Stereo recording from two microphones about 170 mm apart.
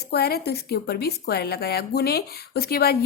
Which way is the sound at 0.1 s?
65° left (ahead or behind).